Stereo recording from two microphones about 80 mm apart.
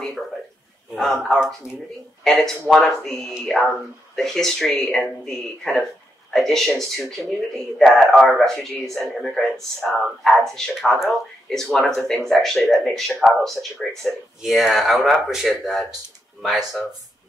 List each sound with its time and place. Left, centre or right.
0.9 s speech: centre